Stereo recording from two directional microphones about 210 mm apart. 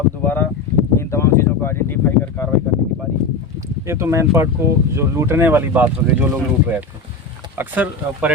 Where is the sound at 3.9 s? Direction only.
15° right (ahead or behind).